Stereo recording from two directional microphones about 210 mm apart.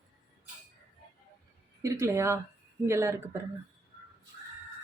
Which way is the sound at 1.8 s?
15° right (ahead or behind).